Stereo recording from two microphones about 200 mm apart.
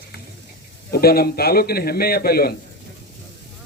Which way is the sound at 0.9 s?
50° left (ahead or behind).